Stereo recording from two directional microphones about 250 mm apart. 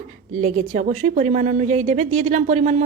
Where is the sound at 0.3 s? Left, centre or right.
Right.